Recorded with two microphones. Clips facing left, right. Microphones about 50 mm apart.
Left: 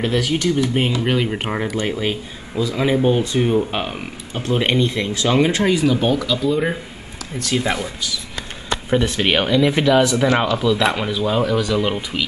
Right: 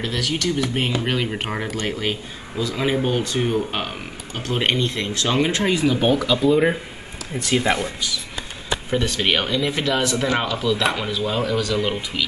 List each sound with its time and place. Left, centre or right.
0.0 s speech: centre
5.7 s speech: centre
8.9 s speech: centre
9.7 s speech: centre
9.9 s speech: centre